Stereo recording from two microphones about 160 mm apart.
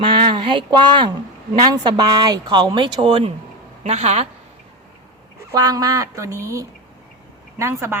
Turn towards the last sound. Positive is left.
turn(degrees=-15)  # may be behind; listen again after turning